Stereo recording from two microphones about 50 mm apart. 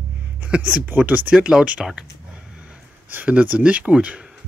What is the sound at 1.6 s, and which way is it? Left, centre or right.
Speech, right.